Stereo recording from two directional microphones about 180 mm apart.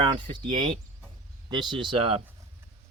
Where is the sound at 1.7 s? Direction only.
30° right (ahead or behind).